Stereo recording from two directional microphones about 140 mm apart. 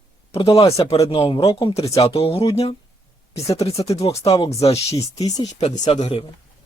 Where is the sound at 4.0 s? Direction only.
45° left (ahead or behind).